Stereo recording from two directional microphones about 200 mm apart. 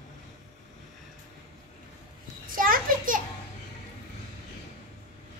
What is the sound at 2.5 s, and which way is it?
Children playing, 45° right (ahead or behind).